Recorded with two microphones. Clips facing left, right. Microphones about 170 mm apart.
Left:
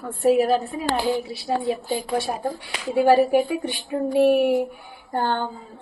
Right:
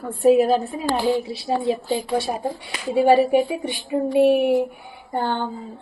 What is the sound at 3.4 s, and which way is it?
Speech, 20° right (ahead or behind).